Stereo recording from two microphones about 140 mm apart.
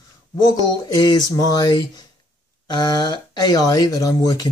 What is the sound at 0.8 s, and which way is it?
Speech, 30° left (ahead or behind).